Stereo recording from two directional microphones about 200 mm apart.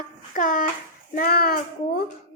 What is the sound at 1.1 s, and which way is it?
Speech, 45° left (ahead or behind).